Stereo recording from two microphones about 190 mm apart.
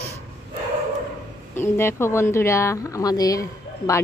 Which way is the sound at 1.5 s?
10° left (ahead or behind).